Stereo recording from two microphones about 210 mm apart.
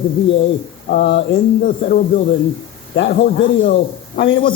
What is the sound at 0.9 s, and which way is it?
Speech, 55° left (ahead or behind).